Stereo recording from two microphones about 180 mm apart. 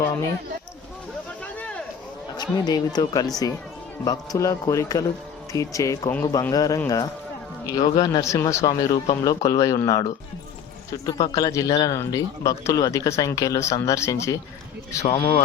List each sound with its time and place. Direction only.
1.5 s a sound: 5° left (ahead or behind)
2.3 s a man's voice: 25° left (ahead or behind)
15.0 s speech: 30° left (ahead or behind)